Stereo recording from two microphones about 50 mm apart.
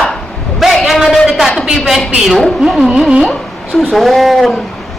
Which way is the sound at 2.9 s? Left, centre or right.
Centre.